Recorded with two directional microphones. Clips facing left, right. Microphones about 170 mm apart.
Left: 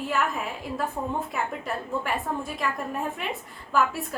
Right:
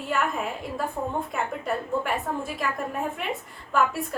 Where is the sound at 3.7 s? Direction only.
Centre (ahead or behind).